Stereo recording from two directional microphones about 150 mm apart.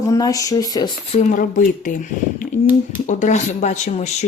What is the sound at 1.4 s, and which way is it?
Speech, 60° left (ahead or behind).